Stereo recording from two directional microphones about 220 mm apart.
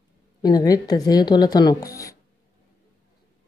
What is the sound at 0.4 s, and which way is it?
Speech, 20° left (ahead or behind).